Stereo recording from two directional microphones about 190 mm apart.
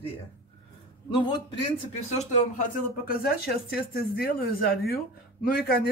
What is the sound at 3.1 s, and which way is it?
Speech, 55° left (ahead or behind).